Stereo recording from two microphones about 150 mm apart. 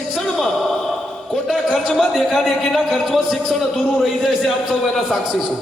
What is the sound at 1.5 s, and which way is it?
A man's voice, centre (ahead or behind).